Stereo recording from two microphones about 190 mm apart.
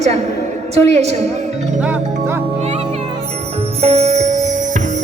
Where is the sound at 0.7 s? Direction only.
35° right (ahead or behind).